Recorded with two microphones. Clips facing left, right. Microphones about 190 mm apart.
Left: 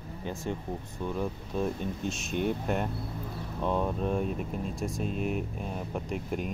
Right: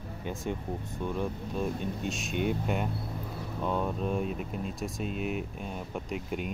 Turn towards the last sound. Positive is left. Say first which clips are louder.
# left 1 dB
turn(degrees=0)  # may be behind; listen again after turning